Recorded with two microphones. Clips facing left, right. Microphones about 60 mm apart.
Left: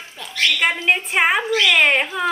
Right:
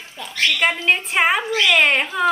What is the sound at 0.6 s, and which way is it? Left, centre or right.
A woman's voice, centre.